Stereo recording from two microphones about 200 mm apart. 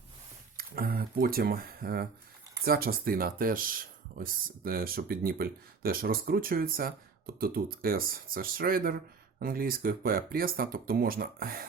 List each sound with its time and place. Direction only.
0.5 s speech: 45° right (ahead or behind)